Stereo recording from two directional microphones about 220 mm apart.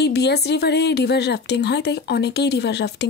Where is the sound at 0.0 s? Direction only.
50° left (ahead or behind).